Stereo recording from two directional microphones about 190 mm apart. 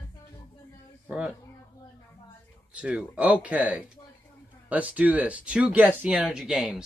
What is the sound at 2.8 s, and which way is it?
Speech, 5° right (ahead or behind).